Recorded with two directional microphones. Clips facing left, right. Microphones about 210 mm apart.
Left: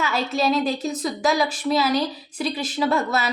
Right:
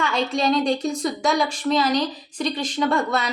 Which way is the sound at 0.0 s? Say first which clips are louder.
Right 1 dB; 5° left (ahead or behind).